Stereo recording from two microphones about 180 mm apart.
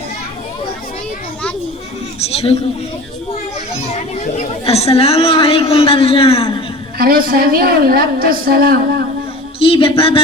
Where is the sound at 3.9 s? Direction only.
40° left (ahead or behind).